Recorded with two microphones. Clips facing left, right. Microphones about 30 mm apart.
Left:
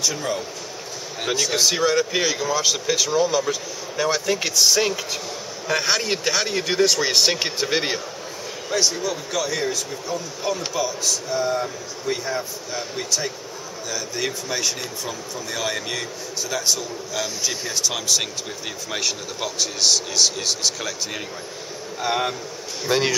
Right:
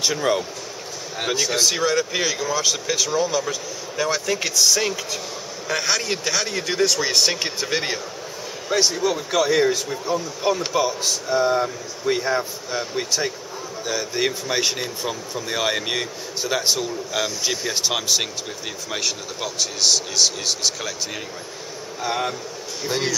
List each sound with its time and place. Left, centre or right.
0.0 s speech: right
1.2 s speech: centre
1.6 s speech: centre
8.6 s speech: centre
18.9 s speech: centre
22.0 s speech: centre